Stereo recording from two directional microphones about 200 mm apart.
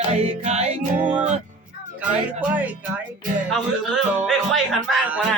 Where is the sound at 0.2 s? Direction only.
35° right (ahead or behind).